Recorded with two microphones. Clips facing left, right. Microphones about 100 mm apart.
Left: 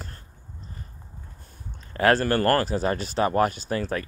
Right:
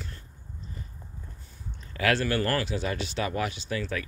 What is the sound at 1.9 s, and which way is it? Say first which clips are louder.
Speech: left 5 dB; 40° left (ahead or behind).